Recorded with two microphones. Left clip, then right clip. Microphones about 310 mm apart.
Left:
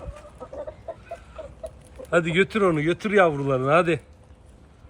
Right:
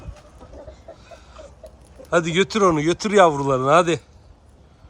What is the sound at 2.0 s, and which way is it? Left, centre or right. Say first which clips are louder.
Speech: right 2 dB; centre.